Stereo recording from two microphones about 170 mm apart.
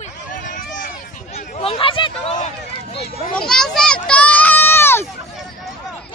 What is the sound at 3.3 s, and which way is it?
Children playing, 5° left (ahead or behind).